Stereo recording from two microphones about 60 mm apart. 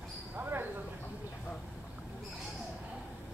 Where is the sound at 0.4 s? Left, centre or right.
Right.